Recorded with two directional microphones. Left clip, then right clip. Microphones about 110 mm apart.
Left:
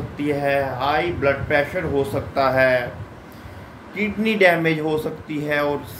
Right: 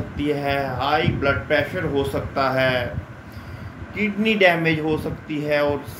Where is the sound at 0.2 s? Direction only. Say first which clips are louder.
Left 2 dB; 10° right (ahead or behind).